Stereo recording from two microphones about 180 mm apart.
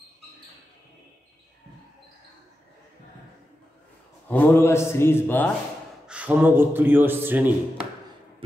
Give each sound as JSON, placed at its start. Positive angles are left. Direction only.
{"t": 4.3, "sound": "a man's voice", "side_deg": 10}
{"t": 6.0, "sound": "a man's voice", "side_deg": -10}